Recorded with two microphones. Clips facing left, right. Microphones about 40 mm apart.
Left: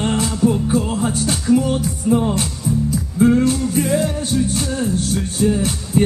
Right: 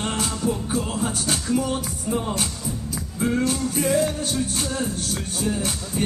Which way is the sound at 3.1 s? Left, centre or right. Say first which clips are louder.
Left 9 dB; left.